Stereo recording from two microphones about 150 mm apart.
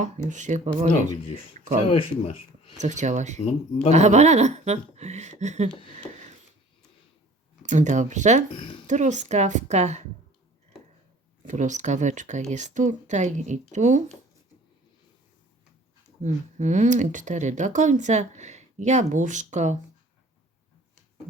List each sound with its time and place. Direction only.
0.3 s speech: 55° right (ahead or behind)
1.9 s speech: 40° left (ahead or behind)
2.7 s speech: 55° right (ahead or behind)
7.6 s speech: 55° right (ahead or behind)
11.4 s speech: 55° right (ahead or behind)
16.2 s speech: 55° right (ahead or behind)